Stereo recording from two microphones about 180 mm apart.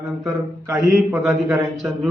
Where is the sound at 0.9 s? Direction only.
Centre (ahead or behind).